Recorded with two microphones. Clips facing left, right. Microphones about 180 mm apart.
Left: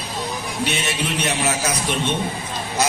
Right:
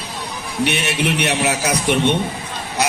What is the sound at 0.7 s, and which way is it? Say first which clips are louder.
A man's voice: right 6 dB; 65° right (ahead or behind).